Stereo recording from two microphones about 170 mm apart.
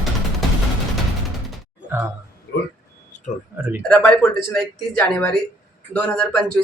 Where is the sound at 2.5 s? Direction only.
90° left.